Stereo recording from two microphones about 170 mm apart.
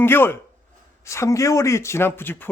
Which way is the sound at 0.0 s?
15° left (ahead or behind).